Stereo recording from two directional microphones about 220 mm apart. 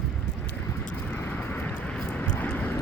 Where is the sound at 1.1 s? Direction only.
10° left (ahead or behind).